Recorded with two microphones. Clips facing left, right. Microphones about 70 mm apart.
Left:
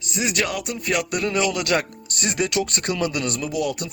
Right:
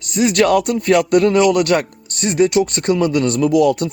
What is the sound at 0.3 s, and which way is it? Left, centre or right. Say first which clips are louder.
Speech: right 12 dB; right.